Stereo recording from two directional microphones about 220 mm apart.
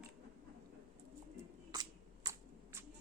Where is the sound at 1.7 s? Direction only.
20° right (ahead or behind).